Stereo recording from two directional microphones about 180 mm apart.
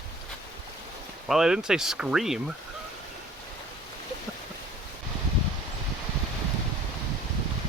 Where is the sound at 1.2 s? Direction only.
Centre (ahead or behind).